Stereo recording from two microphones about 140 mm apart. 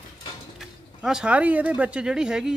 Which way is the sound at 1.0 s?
5° right (ahead or behind).